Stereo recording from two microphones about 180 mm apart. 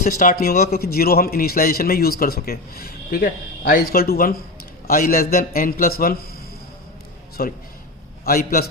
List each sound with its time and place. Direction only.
0.0 s a man's voice: 50° left (ahead or behind)
7.4 s a man's voice: 55° left (ahead or behind)